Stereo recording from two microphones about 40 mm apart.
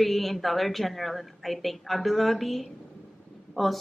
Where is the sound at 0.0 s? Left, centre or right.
Centre.